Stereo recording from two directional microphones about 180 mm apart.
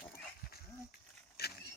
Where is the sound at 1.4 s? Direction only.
60° left (ahead or behind).